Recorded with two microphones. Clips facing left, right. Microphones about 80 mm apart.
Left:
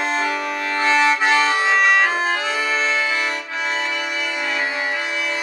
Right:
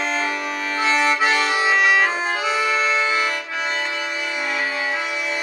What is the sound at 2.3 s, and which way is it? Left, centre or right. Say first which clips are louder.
Accordion: right 1 dB; centre.